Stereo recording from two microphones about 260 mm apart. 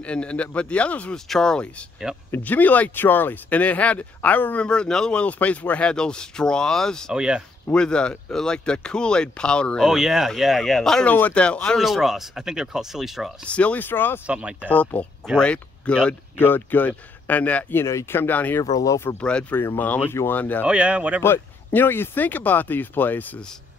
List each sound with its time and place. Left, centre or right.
0.0 s speech: centre
14.2 s speech: centre
14.7 s speech: centre
20.6 s speech: centre
21.2 s speech: centre